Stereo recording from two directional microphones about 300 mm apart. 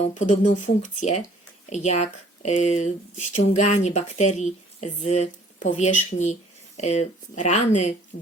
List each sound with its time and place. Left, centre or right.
0.1 s speech: left